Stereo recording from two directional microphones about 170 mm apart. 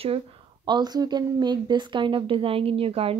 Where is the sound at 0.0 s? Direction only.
35° right (ahead or behind).